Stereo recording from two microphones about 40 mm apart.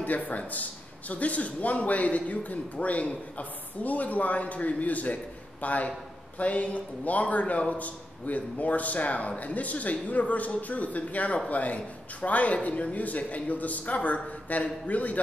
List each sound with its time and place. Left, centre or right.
0.0 s a man's voice: left